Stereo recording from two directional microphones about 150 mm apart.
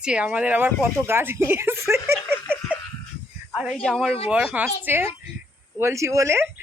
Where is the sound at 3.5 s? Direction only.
Centre (ahead or behind); by 6.4 s 20° right (ahead or behind).